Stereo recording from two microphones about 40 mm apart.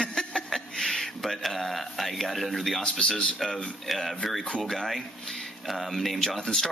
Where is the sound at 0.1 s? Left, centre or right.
Centre.